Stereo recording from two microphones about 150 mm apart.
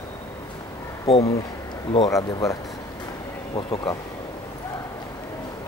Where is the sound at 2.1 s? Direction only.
20° left (ahead or behind).